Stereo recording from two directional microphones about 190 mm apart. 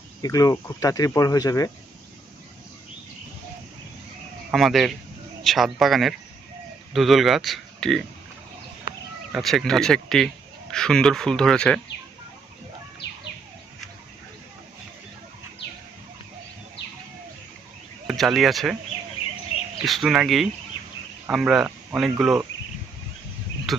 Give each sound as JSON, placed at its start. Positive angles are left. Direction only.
{"t": 0.2, "sound": "speech", "side_deg": 20}
{"t": 4.5, "sound": "speech", "side_deg": 0}
{"t": 9.3, "sound": "speech", "side_deg": 0}
{"t": 18.1, "sound": "speech", "side_deg": 0}
{"t": 19.8, "sound": "speech", "side_deg": 0}
{"t": 23.7, "sound": "cricket", "side_deg": 0}